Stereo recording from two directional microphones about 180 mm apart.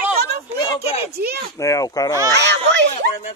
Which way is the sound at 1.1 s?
60° right (ahead or behind).